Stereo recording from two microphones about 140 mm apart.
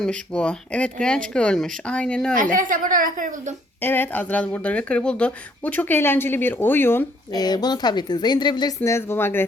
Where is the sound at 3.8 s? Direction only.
15° left (ahead or behind).